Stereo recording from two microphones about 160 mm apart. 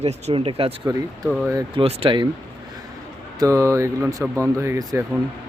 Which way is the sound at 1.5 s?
35° right (ahead or behind).